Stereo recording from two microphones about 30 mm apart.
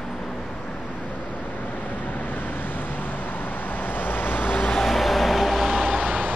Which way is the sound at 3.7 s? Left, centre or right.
Left.